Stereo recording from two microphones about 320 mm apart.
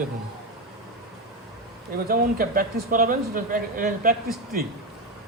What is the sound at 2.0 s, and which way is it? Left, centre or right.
Speech, right.